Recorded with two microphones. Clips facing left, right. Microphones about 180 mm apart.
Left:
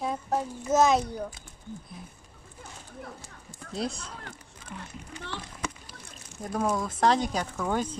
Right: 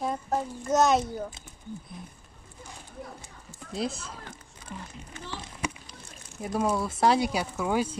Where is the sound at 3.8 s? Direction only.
Centre (ahead or behind).